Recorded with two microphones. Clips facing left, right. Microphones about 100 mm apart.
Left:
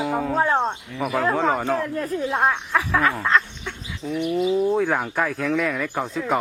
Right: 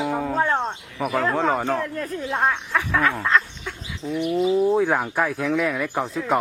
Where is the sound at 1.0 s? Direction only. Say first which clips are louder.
Even; centre (ahead or behind).